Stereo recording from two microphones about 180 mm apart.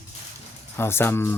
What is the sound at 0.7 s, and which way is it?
Speech, 10° left (ahead or behind).